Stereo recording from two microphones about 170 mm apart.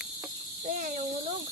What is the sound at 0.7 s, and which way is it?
Speech, 50° right (ahead or behind).